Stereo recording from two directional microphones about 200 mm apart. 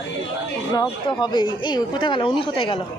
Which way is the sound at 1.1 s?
25° left (ahead or behind).